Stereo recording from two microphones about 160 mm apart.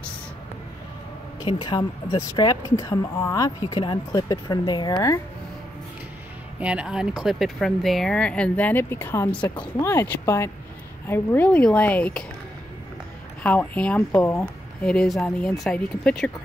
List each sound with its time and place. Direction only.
1.5 s speech: 25° left (ahead or behind)
6.6 s speech: 5° right (ahead or behind)
13.4 s speech: 10° left (ahead or behind)